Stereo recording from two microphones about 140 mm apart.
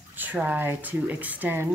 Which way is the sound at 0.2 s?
10° right (ahead or behind).